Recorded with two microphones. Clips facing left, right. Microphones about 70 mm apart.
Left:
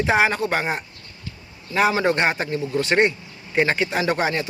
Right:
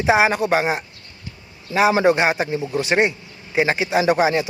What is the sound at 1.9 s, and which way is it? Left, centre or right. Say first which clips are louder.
Speech: right 4 dB; centre.